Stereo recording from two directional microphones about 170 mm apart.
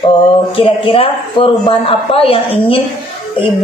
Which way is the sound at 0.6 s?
30° left (ahead or behind).